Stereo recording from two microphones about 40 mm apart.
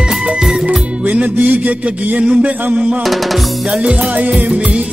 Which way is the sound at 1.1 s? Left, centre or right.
Right.